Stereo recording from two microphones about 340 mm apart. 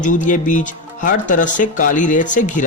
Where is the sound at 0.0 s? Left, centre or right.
Left.